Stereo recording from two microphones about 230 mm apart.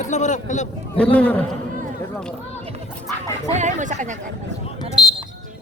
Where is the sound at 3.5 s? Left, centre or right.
Right.